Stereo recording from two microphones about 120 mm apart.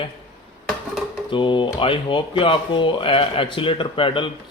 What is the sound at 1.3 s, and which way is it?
Speech, 45° left (ahead or behind).